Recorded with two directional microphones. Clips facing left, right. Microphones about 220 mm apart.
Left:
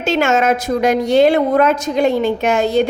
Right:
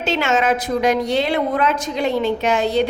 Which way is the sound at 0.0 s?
45° left (ahead or behind).